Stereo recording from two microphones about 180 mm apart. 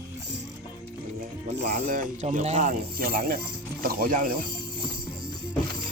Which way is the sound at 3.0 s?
55° right (ahead or behind).